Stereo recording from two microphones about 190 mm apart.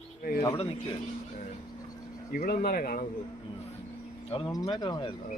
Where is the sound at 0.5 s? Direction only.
30° left (ahead or behind).